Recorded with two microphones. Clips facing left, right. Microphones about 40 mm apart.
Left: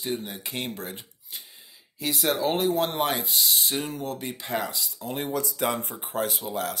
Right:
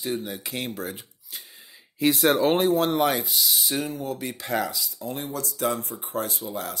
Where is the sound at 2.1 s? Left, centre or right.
Right.